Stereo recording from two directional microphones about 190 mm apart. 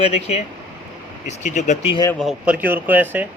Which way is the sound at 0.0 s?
35° left (ahead or behind).